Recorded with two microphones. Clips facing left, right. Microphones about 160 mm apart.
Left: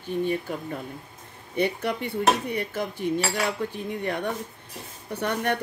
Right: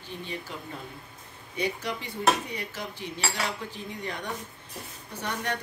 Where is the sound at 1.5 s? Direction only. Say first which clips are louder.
Left 6 dB; 60° left (ahead or behind).